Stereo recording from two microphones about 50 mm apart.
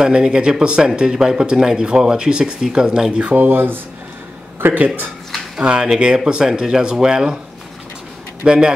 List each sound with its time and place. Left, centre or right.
0.0 s speech: centre
3.3 s speech: right
5.6 s speech: centre
8.5 s speech: centre